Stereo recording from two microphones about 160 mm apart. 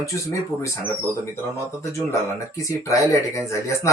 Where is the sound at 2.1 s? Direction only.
20° left (ahead or behind).